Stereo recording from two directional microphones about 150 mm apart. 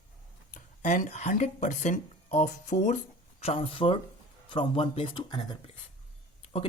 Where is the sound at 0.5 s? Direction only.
60° left (ahead or behind).